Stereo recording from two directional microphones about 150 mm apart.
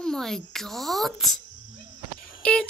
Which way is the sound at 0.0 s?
5° left (ahead or behind).